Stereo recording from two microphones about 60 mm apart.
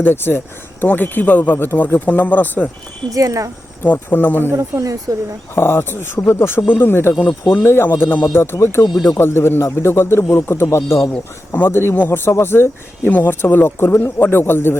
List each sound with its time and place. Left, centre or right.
0.0 s speech: left
3.1 s speech: right
3.8 s speech: left
4.5 s speech: right
5.5 s speech: left
11.5 s speech: left